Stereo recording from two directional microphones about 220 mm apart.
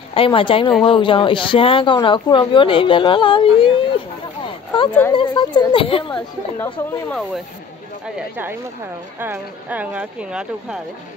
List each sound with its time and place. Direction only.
0.1 s speech: 25° left (ahead or behind)
4.5 s a sound: 20° left (ahead or behind)
5.1 s speech: 20° left (ahead or behind)
6.1 s speech: 10° left (ahead or behind)
9.2 s speech: 10° right (ahead or behind)